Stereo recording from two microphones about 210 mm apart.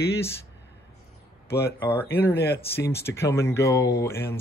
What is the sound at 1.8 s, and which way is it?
Speech, 10° left (ahead or behind).